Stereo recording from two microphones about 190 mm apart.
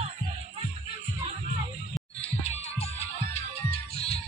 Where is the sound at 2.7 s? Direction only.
35° left (ahead or behind).